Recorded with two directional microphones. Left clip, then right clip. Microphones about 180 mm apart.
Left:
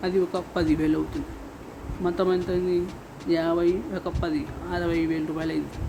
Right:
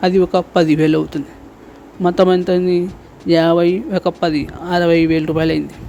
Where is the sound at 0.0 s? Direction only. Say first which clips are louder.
Right 11 dB; 50° right (ahead or behind).